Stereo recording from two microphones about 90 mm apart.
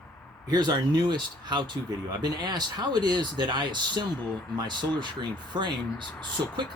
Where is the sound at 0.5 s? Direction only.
50° right (ahead or behind).